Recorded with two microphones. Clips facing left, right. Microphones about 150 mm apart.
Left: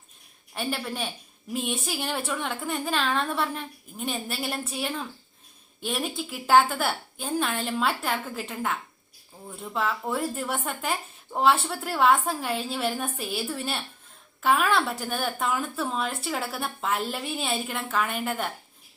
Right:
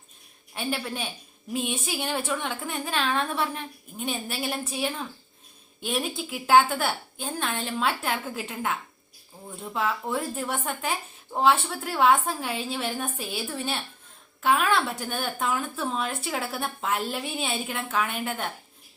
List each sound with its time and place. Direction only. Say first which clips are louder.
0.5 s a woman's voice: even; centre (ahead or behind)